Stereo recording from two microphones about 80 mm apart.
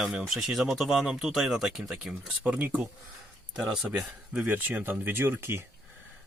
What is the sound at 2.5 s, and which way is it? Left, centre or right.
Speech, centre.